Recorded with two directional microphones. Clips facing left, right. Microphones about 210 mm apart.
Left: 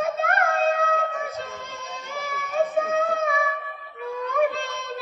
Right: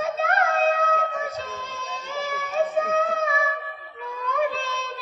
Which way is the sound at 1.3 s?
55° left (ahead or behind).